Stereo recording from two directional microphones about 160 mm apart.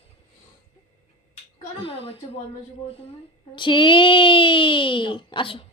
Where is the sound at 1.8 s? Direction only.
35° left (ahead or behind).